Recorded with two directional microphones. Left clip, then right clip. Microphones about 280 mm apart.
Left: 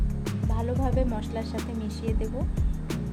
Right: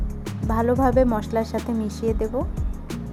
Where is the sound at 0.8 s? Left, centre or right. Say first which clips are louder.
Right 10 dB; right.